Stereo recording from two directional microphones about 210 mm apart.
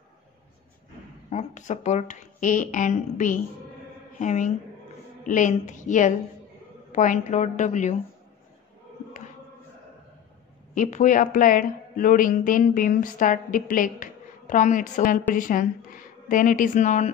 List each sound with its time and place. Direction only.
1.3 s speech: 35° left (ahead or behind)
10.7 s speech: 35° left (ahead or behind)